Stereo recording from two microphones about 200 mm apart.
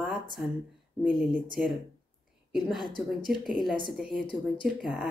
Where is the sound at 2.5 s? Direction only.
Centre (ahead or behind).